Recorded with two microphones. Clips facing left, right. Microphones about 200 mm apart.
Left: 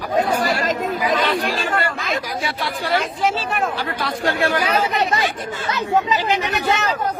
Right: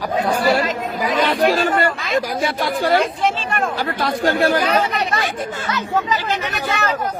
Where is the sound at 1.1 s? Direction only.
45° right (ahead or behind).